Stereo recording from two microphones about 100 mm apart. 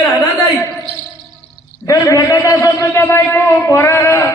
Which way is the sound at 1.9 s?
35° left (ahead or behind).